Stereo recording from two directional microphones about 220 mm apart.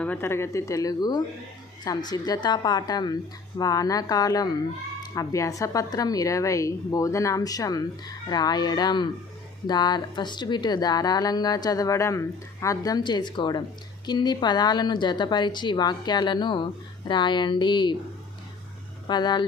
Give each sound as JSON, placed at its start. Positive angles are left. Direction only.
{"t": 0.0, "sound": "a woman's voice", "side_deg": 10}
{"t": 19.0, "sound": "a woman's voice", "side_deg": 20}